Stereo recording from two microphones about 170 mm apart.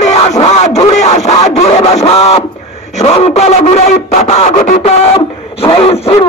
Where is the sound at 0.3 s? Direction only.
40° left (ahead or behind).